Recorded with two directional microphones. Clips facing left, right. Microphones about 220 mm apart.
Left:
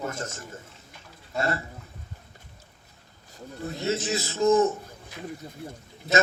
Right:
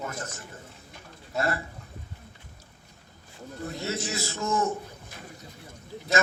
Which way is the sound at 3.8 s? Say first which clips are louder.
Left 6 dB; 20° left (ahead or behind).